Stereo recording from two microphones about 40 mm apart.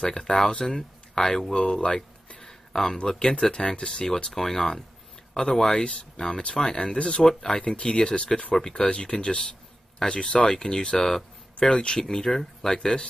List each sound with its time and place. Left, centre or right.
0.0 s speech: centre
2.0 s a sound: centre
3.0 s speech: centre
4.3 s speech: centre